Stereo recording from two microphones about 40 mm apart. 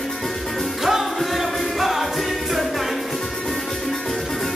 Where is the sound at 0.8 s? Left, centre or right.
Centre.